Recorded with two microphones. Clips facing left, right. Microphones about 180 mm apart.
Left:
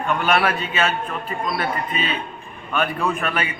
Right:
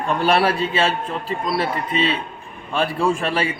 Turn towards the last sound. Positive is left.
turn(degrees=-30)  # may be behind; listen again after turning